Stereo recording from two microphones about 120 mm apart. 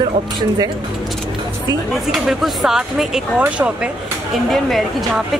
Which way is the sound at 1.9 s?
Centre (ahead or behind).